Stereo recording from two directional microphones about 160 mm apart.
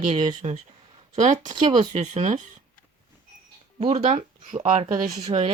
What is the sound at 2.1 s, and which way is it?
Speech, 45° right (ahead or behind).